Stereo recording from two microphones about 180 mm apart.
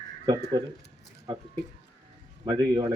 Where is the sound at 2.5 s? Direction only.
25° right (ahead or behind).